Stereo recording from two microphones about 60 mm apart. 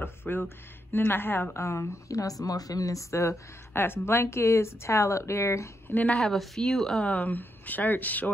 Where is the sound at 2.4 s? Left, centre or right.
Left.